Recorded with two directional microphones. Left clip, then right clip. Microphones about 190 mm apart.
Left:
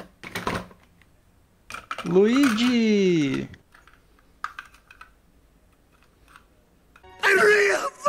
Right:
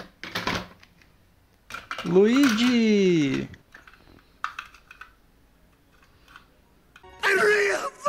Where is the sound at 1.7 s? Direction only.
15° left (ahead or behind).